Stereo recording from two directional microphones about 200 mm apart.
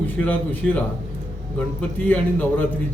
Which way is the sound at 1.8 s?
5° left (ahead or behind).